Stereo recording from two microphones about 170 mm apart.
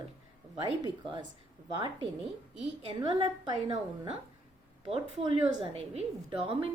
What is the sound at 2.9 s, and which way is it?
A woman's voice, 25° right (ahead or behind).